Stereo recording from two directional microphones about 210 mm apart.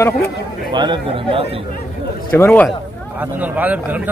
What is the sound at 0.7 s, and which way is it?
Speech, 20° right (ahead or behind).